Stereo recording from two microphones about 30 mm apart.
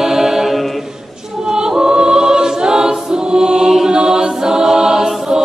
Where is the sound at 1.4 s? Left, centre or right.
Right.